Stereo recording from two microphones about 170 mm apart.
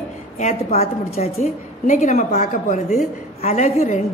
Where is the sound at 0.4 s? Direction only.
40° left (ahead or behind).